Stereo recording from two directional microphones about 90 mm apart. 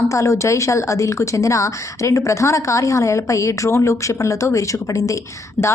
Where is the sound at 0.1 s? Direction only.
35° left (ahead or behind).